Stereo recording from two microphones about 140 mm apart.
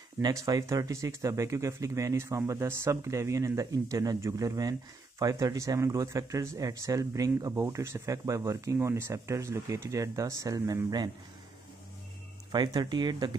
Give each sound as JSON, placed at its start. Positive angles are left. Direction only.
{"t": 0.2, "sound": "speech", "side_deg": -25}
{"t": 12.4, "sound": "speech", "side_deg": -30}